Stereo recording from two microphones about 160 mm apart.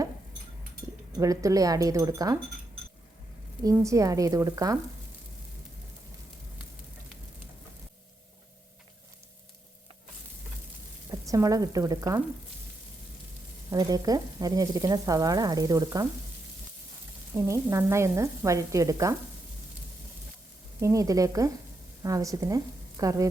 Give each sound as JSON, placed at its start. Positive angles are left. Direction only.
{"t": 1.2, "sound": "frying", "side_deg": -20}
{"t": 3.6, "sound": "frying", "side_deg": -20}
{"t": 11.1, "sound": "speech", "side_deg": -20}
{"t": 13.7, "sound": "frying", "side_deg": -25}
{"t": 17.3, "sound": "frying", "side_deg": -15}
{"t": 20.8, "sound": "frying", "side_deg": -20}
{"t": 22.0, "sound": "speech", "side_deg": -20}